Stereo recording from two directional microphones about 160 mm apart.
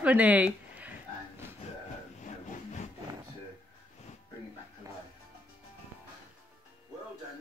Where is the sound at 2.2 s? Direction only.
45° left (ahead or behind).